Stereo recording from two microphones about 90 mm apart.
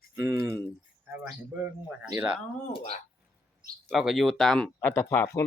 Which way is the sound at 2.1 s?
55° right (ahead or behind).